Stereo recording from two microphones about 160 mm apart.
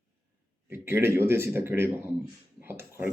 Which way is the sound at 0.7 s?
15° right (ahead or behind).